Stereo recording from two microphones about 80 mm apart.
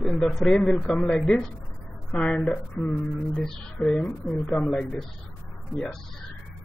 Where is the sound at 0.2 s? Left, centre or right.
Centre; by 3.4 s left.